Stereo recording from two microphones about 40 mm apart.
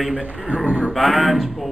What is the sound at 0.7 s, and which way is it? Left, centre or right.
Speech, right.